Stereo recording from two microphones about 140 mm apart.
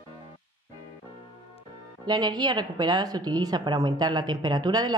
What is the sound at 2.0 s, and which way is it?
A woman's voice, 30° right (ahead or behind).